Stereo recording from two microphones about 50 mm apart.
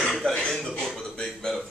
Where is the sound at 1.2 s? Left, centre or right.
Centre.